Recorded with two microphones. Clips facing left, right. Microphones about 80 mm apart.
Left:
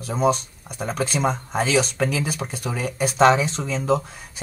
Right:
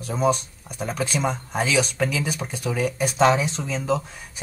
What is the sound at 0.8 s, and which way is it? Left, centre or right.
Speech, left.